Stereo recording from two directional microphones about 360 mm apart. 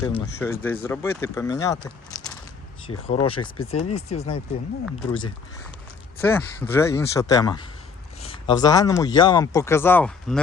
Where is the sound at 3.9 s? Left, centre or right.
Centre.